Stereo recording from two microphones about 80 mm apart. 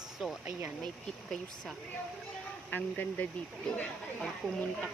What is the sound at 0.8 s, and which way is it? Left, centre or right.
Speech, centre.